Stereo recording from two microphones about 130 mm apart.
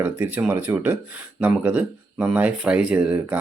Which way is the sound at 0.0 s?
15° right (ahead or behind).